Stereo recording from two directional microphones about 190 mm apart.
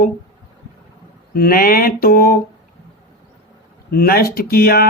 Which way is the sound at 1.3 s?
50° left (ahead or behind).